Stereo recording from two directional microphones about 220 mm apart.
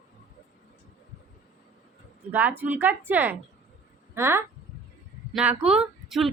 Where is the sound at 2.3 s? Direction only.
10° right (ahead or behind).